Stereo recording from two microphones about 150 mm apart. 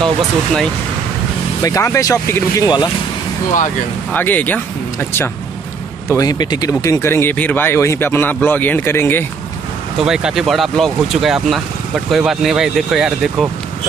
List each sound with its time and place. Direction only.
1.6 s speech: 20° left (ahead or behind)
4.1 s speech: 10° left (ahead or behind)
6.0 s speech: 20° left (ahead or behind)
10.0 s speech: 5° right (ahead or behind)